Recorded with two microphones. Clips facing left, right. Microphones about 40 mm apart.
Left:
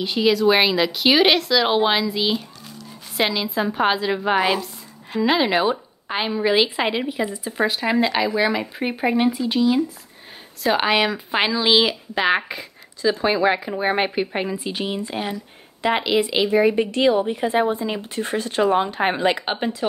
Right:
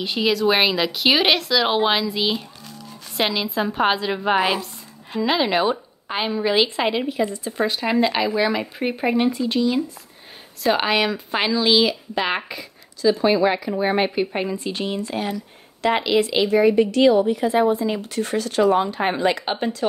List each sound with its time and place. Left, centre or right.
0.0 s a woman's voice: centre
12.4 s speech: left
14.1 s speech: centre
15.0 s speech: left
15.9 s speech: centre
16.8 s speech: left